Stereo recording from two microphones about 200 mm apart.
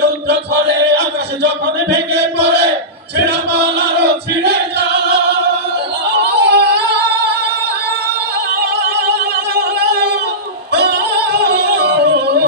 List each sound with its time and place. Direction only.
0.3 s a sound: 55° right (ahead or behind)
3.2 s chant: 55° right (ahead or behind)
6.1 s synthetic singing: 55° right (ahead or behind)
9.6 s music: 55° right (ahead or behind)